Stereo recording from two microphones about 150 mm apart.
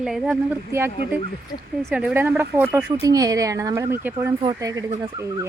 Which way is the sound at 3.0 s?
25° right (ahead or behind).